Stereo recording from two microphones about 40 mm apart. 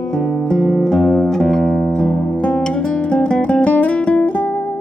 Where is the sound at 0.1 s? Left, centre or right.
Centre.